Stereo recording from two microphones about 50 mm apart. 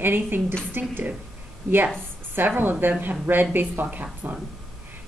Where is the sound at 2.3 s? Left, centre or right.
Right.